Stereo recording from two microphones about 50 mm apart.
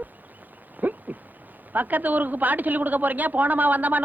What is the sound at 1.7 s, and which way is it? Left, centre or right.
A man's voice, right.